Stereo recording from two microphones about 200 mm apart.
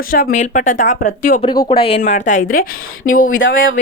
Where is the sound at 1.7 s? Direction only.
30° left (ahead or behind).